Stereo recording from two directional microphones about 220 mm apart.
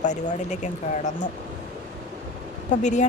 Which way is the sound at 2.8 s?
30° left (ahead or behind).